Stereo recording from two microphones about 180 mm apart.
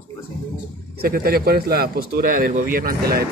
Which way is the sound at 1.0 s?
55° right (ahead or behind).